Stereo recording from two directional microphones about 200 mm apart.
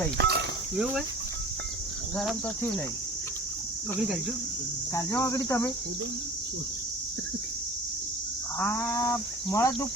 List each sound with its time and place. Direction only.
0.2 s speech: 55° right (ahead or behind)
4.9 s cattle: 15° left (ahead or behind)
8.5 s cattle: 10° left (ahead or behind)